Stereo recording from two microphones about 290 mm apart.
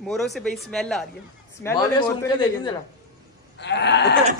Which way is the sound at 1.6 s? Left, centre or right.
Centre.